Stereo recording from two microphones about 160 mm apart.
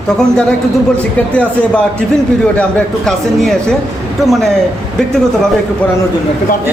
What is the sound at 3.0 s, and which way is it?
A woman's voice, centre (ahead or behind).